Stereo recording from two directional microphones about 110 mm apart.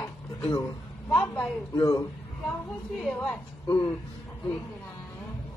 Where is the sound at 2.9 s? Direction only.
5° left (ahead or behind).